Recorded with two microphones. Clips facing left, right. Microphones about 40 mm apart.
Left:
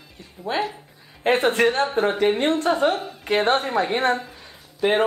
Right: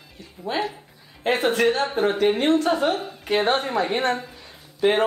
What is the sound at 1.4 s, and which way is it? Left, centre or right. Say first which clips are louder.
Speech: right 1 dB; centre.